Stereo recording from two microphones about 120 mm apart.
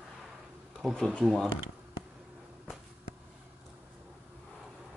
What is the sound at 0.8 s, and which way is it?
Speech, 5° left (ahead or behind).